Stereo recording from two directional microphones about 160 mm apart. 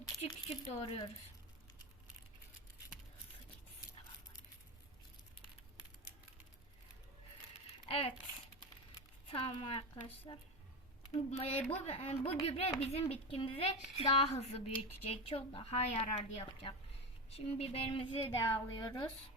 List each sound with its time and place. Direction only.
0.2 s a woman's voice: 35° left (ahead or behind)
7.9 s speech: 35° left (ahead or behind)
9.2 s a woman's voice: 35° left (ahead or behind)
18.3 s a woman's voice: 15° left (ahead or behind)
18.7 s speech: 25° left (ahead or behind)